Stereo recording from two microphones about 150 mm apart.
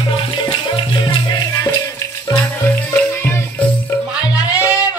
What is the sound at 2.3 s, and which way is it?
Music, 15° left (ahead or behind).